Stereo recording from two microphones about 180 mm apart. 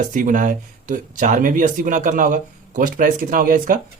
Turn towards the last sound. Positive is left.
turn(degrees=-50)  # may be behind; listen again after turning